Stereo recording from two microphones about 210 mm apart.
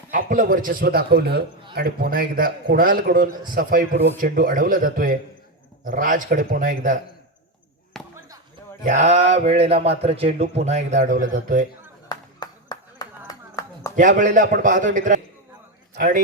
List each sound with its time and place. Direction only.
0.1 s a man's voice: 40° right (ahead or behind)
7.9 s basketball bounce: centre (ahead or behind)
8.8 s a man's voice: 35° right (ahead or behind)
12.0 s a sound: 20° left (ahead or behind)
13.9 s a man's voice: 40° right (ahead or behind)